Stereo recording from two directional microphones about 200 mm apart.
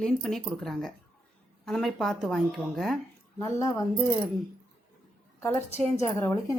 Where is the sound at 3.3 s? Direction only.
15° left (ahead or behind).